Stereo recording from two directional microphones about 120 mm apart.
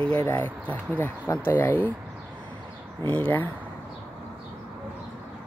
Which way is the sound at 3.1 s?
15° left (ahead or behind).